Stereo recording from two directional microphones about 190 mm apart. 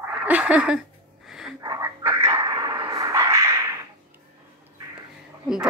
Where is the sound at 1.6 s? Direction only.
15° right (ahead or behind).